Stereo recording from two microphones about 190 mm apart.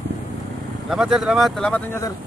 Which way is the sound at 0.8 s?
5° right (ahead or behind).